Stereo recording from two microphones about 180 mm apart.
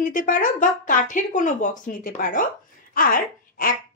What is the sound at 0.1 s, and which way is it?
Speech, 50° left (ahead or behind).